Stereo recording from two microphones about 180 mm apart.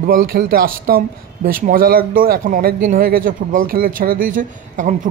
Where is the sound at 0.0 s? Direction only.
55° right (ahead or behind).